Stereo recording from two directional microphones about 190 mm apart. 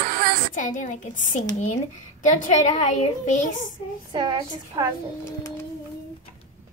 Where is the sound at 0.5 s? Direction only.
40° left (ahead or behind).